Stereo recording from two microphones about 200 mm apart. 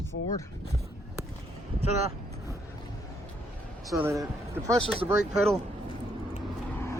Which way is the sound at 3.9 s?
15° right (ahead or behind).